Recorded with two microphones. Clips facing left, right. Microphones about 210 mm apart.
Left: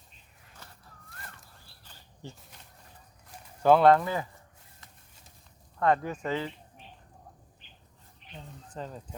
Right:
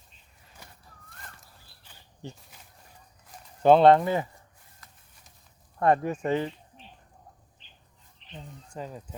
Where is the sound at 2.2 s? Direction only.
20° right (ahead or behind).